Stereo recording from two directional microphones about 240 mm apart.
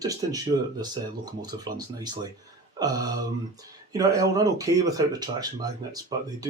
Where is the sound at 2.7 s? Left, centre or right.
Centre.